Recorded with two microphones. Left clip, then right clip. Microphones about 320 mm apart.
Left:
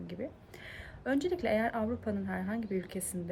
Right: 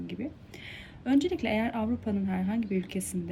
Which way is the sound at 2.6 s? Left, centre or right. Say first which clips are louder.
Right 4 dB; left.